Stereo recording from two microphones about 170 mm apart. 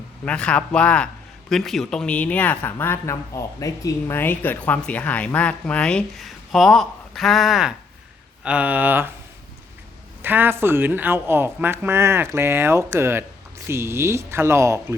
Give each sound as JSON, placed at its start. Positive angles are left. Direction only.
{"t": 0.3, "sound": "a man's voice", "side_deg": 5}
{"t": 10.2, "sound": "speech", "side_deg": -10}